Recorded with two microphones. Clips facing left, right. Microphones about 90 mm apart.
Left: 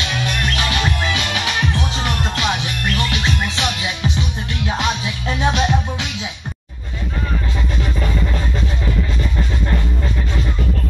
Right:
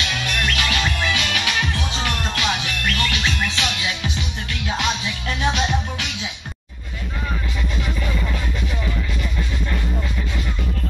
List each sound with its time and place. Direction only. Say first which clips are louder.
0.0 s music: left 2 dB; 20° left (ahead or behind)